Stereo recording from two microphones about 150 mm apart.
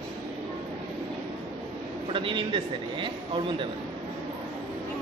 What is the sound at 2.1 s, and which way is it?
A man's voice, 35° right (ahead or behind).